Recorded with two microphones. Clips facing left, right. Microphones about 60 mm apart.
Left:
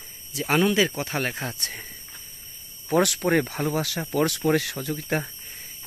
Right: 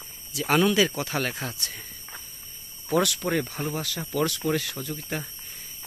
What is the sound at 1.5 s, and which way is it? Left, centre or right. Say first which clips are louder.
Speech: left 2 dB; left.